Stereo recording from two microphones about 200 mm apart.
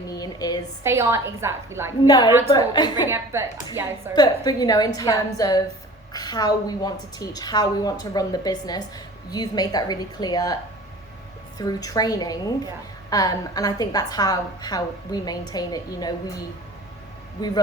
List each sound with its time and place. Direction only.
0.1 s a sound: 20° left (ahead or behind)
0.9 s a woman's voice: 15° right (ahead or behind)
2.0 s a woman's voice: 20° left (ahead or behind)
3.3 s a woman's voice: 15° right (ahead or behind)
4.1 s a woman's voice: 20° left (ahead or behind)
17.4 s a woman's voice: 20° left (ahead or behind)